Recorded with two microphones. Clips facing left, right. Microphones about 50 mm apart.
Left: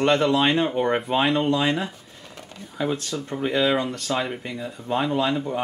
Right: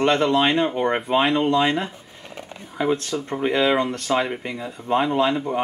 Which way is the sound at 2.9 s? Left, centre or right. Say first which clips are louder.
Right 4 dB; right.